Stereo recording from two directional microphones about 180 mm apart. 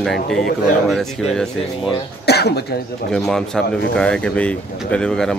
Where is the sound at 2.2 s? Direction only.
65° left (ahead or behind).